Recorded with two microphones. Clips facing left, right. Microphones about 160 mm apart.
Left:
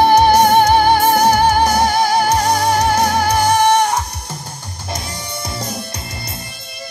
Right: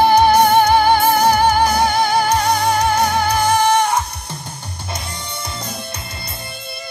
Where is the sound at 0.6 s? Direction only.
40° left (ahead or behind).